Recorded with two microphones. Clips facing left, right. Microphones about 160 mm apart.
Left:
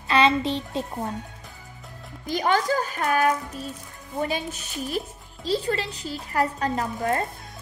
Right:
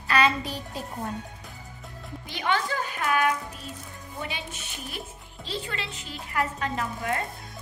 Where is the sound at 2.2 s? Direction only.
40° left (ahead or behind).